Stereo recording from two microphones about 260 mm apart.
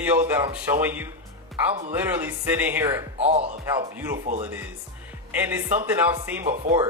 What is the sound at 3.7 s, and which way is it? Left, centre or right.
Speech, centre.